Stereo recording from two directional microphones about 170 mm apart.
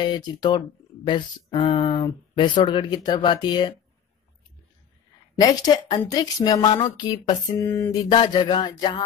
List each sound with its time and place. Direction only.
0.0 s speech: 25° left (ahead or behind)
5.4 s speech: 25° left (ahead or behind)
8.1 s speech: 25° left (ahead or behind)